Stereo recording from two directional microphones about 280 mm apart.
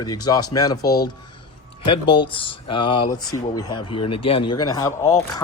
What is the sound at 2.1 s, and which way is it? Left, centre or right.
Speech, centre.